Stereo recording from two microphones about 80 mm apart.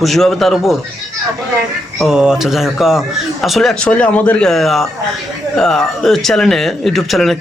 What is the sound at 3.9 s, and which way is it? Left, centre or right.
Speech, centre.